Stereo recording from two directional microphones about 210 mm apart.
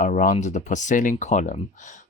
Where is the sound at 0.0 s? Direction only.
40° left (ahead or behind).